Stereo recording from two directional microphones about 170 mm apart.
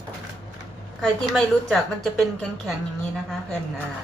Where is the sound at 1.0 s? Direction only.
5° left (ahead or behind).